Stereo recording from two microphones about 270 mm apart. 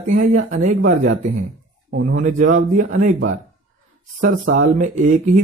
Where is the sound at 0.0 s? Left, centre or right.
Right.